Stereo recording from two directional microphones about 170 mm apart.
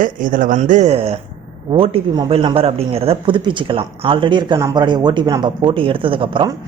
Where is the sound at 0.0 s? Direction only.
55° right (ahead or behind).